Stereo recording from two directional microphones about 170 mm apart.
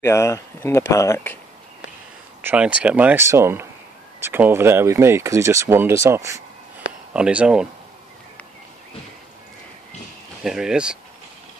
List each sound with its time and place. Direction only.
0.0 s speech: 15° left (ahead or behind)
2.4 s speech: 10° right (ahead or behind)
7.2 s speech: 5° right (ahead or behind)
10.4 s speech: centre (ahead or behind)